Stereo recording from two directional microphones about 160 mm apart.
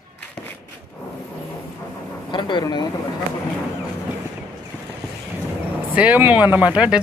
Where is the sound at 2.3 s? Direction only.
25° left (ahead or behind).